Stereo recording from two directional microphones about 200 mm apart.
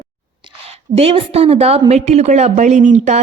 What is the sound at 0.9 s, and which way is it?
A woman's voice, 30° right (ahead or behind).